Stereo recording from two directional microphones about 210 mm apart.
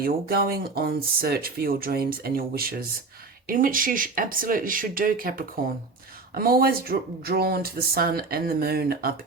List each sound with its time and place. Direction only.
0.0 s speech: 45° right (ahead or behind)